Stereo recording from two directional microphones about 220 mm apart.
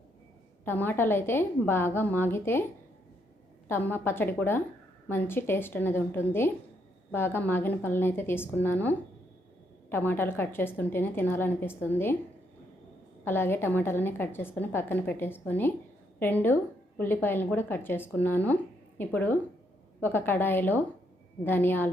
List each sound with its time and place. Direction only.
0.6 s a woman's voice: 10° left (ahead or behind)
3.7 s a woman's voice: 10° left (ahead or behind)
13.2 s a woman's voice: 10° left (ahead or behind)